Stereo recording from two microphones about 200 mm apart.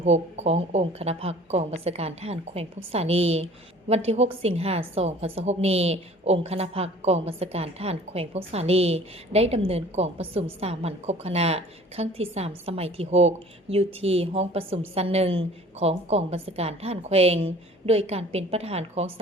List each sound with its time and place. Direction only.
0.0 s a woman's voice: 35° right (ahead or behind)